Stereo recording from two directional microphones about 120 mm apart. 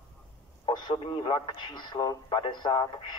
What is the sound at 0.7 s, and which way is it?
A man's voice, 45° left (ahead or behind).